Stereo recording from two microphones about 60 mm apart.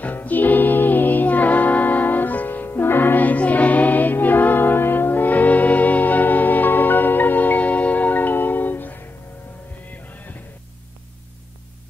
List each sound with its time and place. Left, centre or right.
0.0 s music: left
10.0 s music: left